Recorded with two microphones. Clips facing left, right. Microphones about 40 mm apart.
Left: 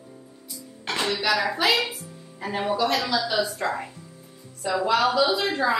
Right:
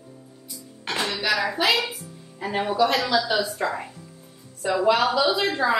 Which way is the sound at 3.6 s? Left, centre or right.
Centre.